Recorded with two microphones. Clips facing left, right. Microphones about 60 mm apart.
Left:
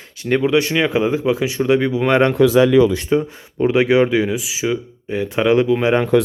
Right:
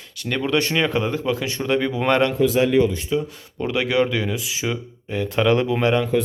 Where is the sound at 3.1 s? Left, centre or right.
Left.